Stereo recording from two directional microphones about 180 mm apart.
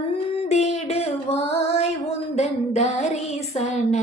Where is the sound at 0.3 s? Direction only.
35° left (ahead or behind).